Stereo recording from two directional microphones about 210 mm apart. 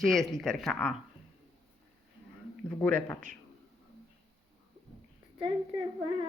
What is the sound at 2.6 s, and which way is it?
Speech, 5° left (ahead or behind).